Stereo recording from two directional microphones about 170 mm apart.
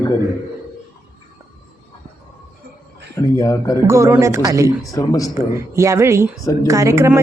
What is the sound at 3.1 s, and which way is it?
Speech, 20° left (ahead or behind).